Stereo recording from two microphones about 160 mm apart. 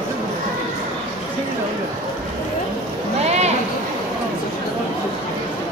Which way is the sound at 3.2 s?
45° right (ahead or behind).